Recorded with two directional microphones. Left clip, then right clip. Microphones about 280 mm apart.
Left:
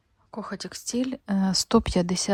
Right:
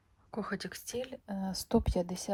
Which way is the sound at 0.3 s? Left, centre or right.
Centre.